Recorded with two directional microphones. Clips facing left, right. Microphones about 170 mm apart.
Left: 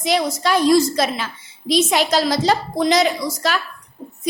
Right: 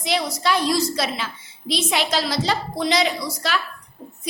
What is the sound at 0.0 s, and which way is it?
A woman's voice, 45° left (ahead or behind).